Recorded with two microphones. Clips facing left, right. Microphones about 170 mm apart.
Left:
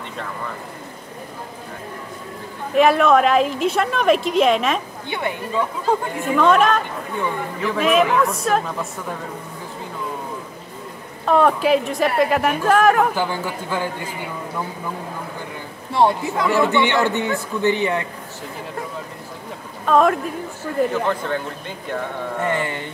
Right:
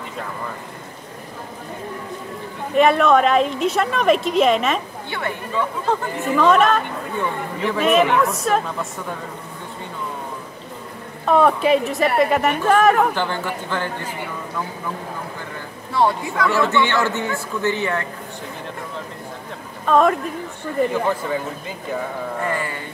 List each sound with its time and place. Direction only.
2.7 s a woman's voice: centre (ahead or behind)
5.1 s a man's voice: 15° left (ahead or behind)
6.1 s a woman's voice: centre (ahead or behind)
11.2 s a woman's voice: centre (ahead or behind)
16.3 s a man's voice: 15° left (ahead or behind)
19.9 s a woman's voice: centre (ahead or behind)
22.5 s a sound: 25° left (ahead or behind)